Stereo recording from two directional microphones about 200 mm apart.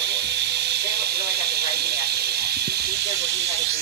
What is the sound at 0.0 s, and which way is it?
Steam, 55° right (ahead or behind).